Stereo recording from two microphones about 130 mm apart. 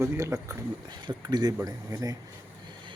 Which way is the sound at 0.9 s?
35° right (ahead or behind).